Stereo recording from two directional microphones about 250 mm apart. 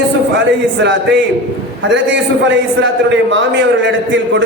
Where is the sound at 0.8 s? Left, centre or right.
Right.